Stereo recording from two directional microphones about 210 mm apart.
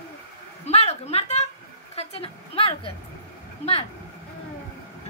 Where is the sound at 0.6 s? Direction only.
30° left (ahead or behind).